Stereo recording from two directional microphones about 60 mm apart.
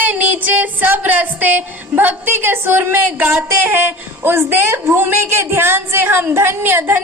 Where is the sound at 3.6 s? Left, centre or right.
Right.